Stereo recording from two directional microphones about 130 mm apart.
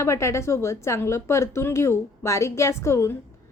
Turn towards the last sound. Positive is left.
turn(degrees=20)  # may be behind; listen again after turning